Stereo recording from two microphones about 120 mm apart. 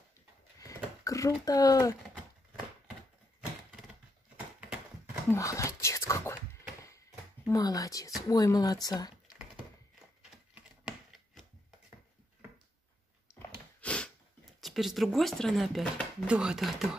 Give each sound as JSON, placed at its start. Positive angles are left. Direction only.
{"t": 1.0, "sound": "speech", "side_deg": 30}
{"t": 3.3, "sound": "a sound", "side_deg": -5}
{"t": 4.6, "sound": "horse", "side_deg": -10}
{"t": 5.3, "sound": "whispering", "side_deg": 25}
{"t": 7.4, "sound": "speech", "side_deg": 30}
{"t": 10.5, "sound": "computer keyboard", "side_deg": -5}
{"t": 13.7, "sound": "snort", "side_deg": 10}
{"t": 14.6, "sound": "speech", "side_deg": 0}